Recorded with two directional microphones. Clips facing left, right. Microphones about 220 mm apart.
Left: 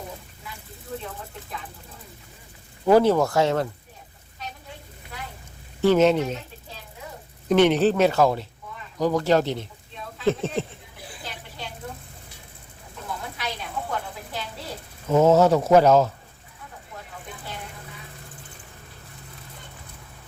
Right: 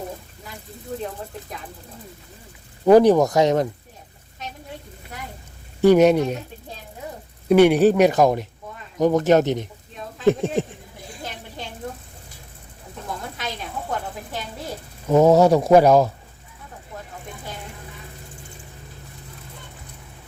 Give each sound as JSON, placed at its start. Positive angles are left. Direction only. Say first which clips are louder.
{"t": 2.8, "sound": "speech", "louder": "right 4 dB", "side_deg": -15}
{"t": 5.8, "sound": "speech", "louder": "right 4 dB", "side_deg": -15}
{"t": 7.4, "sound": "speech", "louder": "right 4 dB", "side_deg": -10}
{"t": 15.1, "sound": "speech", "louder": "right 3 dB", "side_deg": -15}